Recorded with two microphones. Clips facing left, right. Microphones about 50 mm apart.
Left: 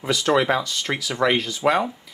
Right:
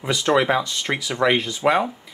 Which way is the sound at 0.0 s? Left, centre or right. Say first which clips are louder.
Right 1 dB; centre.